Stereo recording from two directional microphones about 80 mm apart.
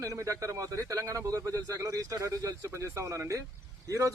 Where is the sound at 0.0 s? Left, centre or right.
Right.